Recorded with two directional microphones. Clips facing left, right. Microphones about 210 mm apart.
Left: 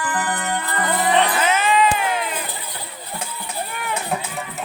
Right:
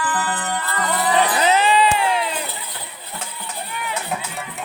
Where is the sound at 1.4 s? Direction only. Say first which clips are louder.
Right 2 dB; 35° right (ahead or behind).